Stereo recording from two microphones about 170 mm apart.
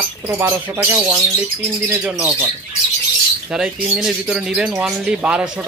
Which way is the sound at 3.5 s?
5° right (ahead or behind).